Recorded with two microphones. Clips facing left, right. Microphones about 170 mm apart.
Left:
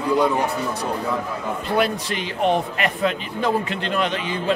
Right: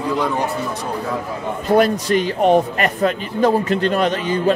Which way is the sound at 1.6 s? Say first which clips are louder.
Right 7 dB; 45° right (ahead or behind).